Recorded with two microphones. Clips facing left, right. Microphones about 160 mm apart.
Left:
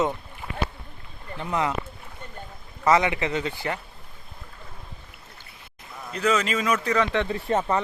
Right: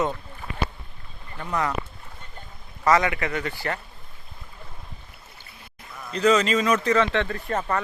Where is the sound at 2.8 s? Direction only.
20° left (ahead or behind).